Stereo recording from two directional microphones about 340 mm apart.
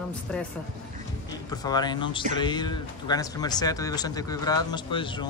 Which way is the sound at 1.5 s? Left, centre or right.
Centre.